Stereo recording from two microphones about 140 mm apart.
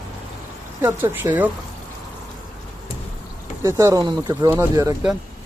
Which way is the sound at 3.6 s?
20° right (ahead or behind).